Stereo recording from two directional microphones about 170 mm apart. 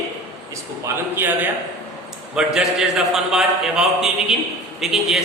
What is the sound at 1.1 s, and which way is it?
A man's voice, 10° right (ahead or behind).